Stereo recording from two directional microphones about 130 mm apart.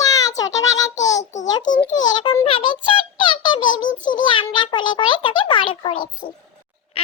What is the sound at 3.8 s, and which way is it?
Speech, 85° left.